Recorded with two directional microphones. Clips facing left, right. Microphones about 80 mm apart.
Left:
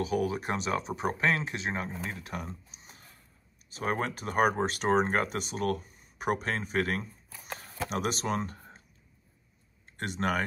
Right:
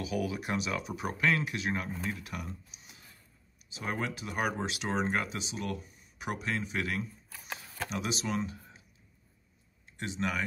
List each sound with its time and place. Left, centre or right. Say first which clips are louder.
0.0 s speech: left 4 dB; left
7.4 s a sound: left 1 dB; left
7.9 s speech: left 3 dB; left
9.9 s speech: left 4 dB; left